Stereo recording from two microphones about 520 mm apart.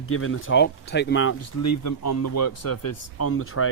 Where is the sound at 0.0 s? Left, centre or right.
Left.